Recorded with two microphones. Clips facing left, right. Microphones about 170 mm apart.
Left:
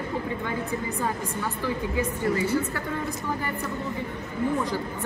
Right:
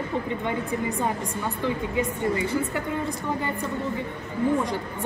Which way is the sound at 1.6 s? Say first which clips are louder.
Right 2 dB; 20° right (ahead or behind).